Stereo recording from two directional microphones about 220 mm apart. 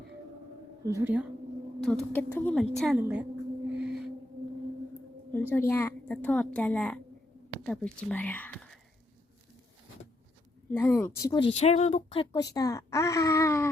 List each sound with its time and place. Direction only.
0.9 s a woman's voice: 10° right (ahead or behind)
3.8 s music: 5° right (ahead or behind)
5.3 s a woman's voice: 10° left (ahead or behind)
10.7 s a woman's voice: 10° left (ahead or behind)